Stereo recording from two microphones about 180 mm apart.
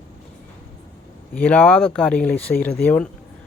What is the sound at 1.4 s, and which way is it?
Speech, 5° left (ahead or behind).